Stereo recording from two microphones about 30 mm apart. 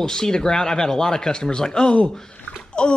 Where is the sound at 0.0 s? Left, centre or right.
Left.